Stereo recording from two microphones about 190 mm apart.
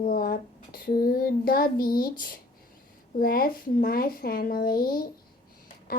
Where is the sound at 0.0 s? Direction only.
50° left (ahead or behind).